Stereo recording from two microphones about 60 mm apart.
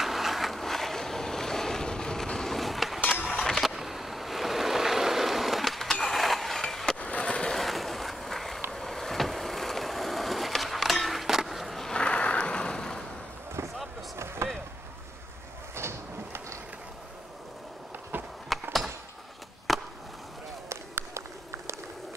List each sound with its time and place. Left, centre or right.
0.0 s boat: centre
3.1 s a sound: centre
3.3 s vehicle: centre
7.0 s skateboard: left
7.5 s skateboard: centre
8.7 s vehicle: centre
11.9 s vehicle: centre
14.1 s a sound: right
15.7 s a sound: right
18.5 s skateboard: centre
19.7 s chop: centre
21.1 s a sound: right